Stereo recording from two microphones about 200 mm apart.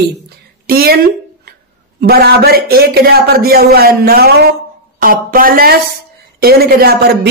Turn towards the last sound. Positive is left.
turn(degrees=-50)  # may be behind; listen again after turning